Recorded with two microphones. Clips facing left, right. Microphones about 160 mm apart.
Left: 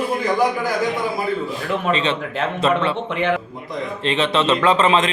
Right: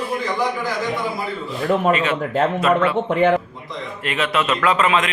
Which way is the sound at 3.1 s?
45° right (ahead or behind).